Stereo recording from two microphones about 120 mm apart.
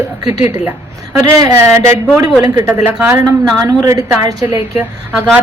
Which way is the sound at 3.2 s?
30° right (ahead or behind).